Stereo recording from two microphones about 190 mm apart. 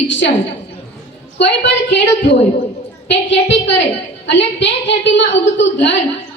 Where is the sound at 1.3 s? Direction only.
65° left (ahead or behind).